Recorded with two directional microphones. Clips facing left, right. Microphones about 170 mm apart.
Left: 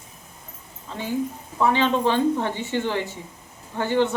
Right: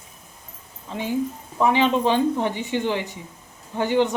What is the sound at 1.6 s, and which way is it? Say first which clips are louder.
Speech: right 1 dB; 15° right (ahead or behind).